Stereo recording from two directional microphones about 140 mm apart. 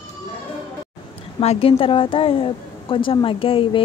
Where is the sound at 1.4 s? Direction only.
45° left (ahead or behind).